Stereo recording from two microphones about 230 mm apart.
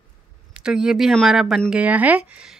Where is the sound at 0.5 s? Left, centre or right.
Centre.